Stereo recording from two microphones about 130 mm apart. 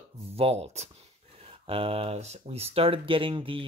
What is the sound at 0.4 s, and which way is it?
Speech, 55° right (ahead or behind).